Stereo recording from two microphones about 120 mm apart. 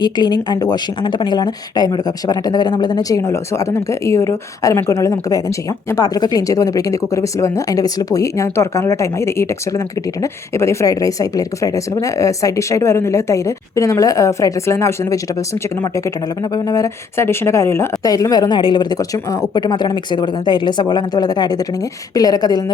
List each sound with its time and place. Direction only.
0.0 s a woman's voice: 35° left (ahead or behind)